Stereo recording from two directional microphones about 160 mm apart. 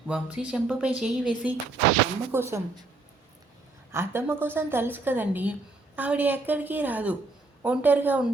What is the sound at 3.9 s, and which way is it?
A woman's voice, 15° right (ahead or behind).